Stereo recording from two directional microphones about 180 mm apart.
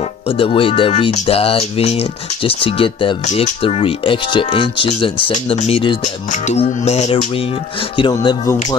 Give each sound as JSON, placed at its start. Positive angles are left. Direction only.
{"t": 0.4, "sound": "speech", "side_deg": 30}
{"t": 3.3, "sound": "speech", "side_deg": 40}
{"t": 3.6, "sound": "speech", "side_deg": 30}
{"t": 8.0, "sound": "speech", "side_deg": 25}